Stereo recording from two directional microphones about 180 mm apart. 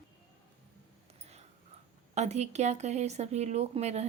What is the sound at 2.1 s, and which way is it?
Speech, 40° right (ahead or behind).